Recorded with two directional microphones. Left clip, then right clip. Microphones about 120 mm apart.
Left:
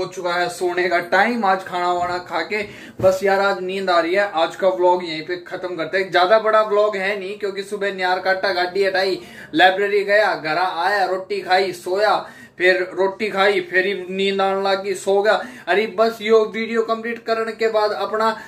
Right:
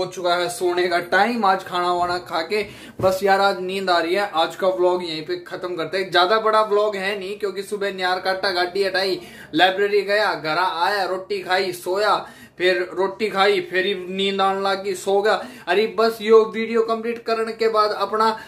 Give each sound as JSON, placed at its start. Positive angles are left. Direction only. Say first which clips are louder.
{"t": 0.2, "sound": "speech", "louder": "even", "side_deg": -25}
{"t": 9.5, "sound": "speech", "louder": "left 2 dB", "side_deg": -20}